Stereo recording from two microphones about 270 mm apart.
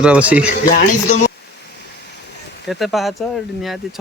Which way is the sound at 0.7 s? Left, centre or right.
Left.